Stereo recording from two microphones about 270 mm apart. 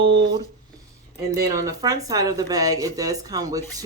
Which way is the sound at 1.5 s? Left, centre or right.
Centre.